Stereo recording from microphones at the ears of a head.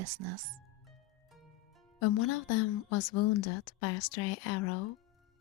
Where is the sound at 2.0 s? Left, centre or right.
Left.